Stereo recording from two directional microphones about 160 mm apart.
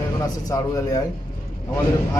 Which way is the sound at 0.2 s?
20° left (ahead or behind).